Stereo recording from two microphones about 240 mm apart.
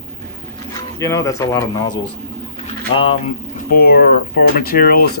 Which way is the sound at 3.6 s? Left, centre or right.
Left.